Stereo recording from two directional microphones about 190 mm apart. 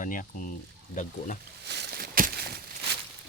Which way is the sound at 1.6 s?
60° right (ahead or behind).